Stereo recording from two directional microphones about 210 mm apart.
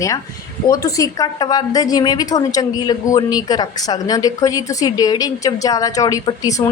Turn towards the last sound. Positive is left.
turn(degrees=15)  # may be behind; listen again after turning